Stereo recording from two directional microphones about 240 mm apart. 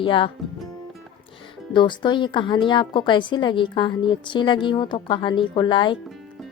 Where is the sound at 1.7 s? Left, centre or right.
Centre.